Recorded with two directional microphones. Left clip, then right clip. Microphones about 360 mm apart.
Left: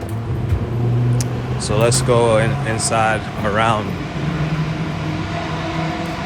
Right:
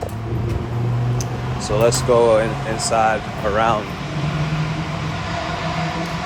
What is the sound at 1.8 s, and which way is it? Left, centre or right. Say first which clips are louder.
Speech: right 1 dB; centre.